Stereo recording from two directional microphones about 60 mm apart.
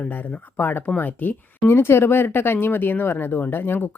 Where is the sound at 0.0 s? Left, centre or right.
Left.